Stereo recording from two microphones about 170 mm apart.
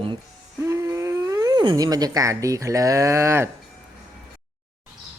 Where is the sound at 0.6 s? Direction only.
15° right (ahead or behind).